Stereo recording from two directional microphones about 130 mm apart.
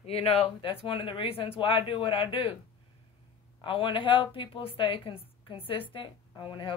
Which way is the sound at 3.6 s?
40° left (ahead or behind).